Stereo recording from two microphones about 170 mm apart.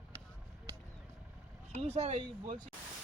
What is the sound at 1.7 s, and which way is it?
Speech, 35° right (ahead or behind).